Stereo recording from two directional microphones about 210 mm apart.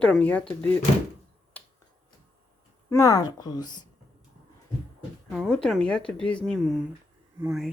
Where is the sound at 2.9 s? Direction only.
15° left (ahead or behind).